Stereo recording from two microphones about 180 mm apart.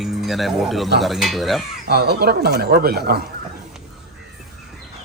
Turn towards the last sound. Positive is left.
turn(degrees=-60)  # may be behind; listen again after turning